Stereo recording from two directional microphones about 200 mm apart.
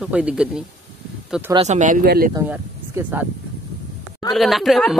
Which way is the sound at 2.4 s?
10° right (ahead or behind).